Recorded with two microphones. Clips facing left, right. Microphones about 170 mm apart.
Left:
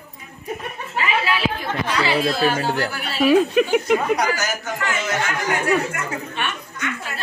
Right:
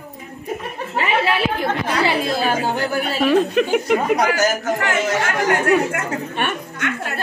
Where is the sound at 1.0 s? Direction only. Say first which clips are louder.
Right 3 dB; 60° right (ahead or behind).